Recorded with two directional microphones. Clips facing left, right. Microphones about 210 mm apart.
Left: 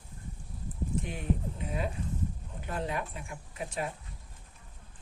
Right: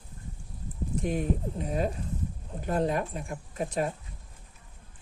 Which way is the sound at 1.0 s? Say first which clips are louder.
Right 5 dB; 40° right (ahead or behind).